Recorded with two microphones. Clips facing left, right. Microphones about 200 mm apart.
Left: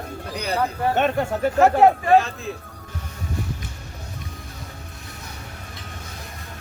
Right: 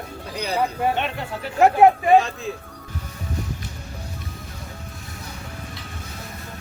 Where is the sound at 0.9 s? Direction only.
45° left (ahead or behind).